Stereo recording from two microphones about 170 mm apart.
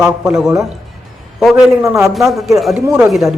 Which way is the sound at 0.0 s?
5° right (ahead or behind).